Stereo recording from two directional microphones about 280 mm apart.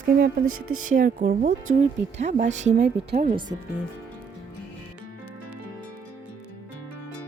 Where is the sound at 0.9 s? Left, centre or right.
Right.